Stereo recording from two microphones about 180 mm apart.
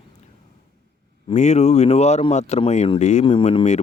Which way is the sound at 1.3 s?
40° left (ahead or behind).